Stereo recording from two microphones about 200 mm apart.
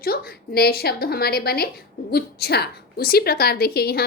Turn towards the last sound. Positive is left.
turn(degrees=50)  # may be behind; listen again after turning